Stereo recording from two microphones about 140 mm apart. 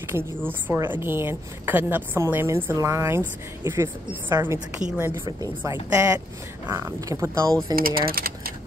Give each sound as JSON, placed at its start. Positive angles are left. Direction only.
{"t": 0.1, "sound": "a woman's voice", "side_deg": 15}
{"t": 0.5, "sound": "a woman's voice", "side_deg": -15}
{"t": 7.7, "sound": "speech", "side_deg": -90}